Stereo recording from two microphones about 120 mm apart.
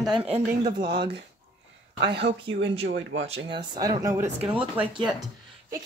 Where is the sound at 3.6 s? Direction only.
30° right (ahead or behind).